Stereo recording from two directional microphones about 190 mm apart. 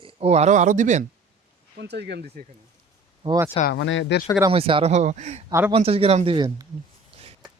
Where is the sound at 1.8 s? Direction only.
65° right (ahead or behind).